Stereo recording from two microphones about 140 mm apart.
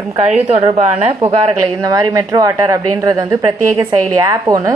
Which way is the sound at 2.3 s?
25° right (ahead or behind).